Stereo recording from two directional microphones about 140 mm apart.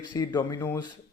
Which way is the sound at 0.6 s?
15° left (ahead or behind).